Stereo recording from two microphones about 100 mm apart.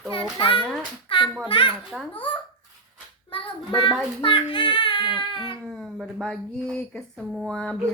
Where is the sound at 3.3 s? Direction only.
55° left (ahead or behind).